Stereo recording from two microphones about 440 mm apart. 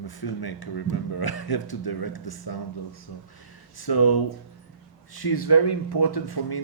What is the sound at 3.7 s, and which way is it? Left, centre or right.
Speech, left.